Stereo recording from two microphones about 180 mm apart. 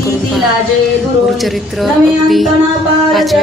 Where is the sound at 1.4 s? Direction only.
Centre (ahead or behind).